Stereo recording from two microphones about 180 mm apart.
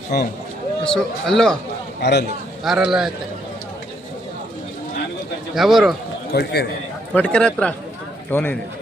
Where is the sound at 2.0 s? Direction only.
70° left (ahead or behind).